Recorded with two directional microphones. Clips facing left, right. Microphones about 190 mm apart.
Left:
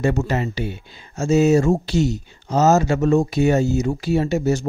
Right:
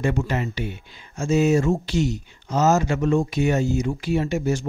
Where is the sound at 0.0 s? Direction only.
40° left (ahead or behind).